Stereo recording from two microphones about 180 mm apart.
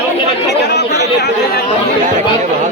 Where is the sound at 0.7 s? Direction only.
70° left (ahead or behind).